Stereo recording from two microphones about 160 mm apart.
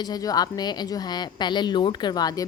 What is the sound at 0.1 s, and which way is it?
Speech, 25° left (ahead or behind).